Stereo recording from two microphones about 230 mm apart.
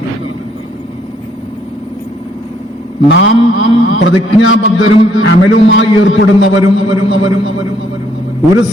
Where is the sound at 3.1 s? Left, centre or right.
Left.